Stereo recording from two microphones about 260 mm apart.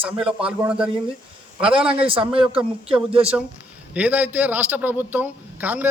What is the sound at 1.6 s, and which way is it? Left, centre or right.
Speech, right.